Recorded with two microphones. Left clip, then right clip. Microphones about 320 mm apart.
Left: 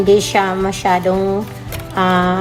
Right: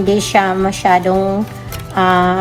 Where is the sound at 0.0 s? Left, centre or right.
Centre.